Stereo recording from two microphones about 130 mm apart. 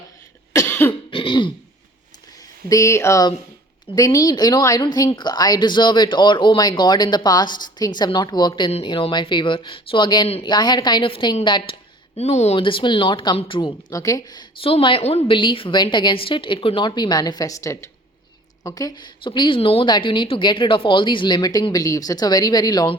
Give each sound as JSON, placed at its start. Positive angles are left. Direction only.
{"t": 0.7, "sound": "cough", "side_deg": 15}
{"t": 1.1, "sound": "throat clearing", "side_deg": 40}
{"t": 2.6, "sound": "a sound", "side_deg": 25}
{"t": 3.9, "sound": "speech", "side_deg": 25}
{"t": 12.5, "sound": "speech", "side_deg": 40}
{"t": 14.6, "sound": "speech", "side_deg": 45}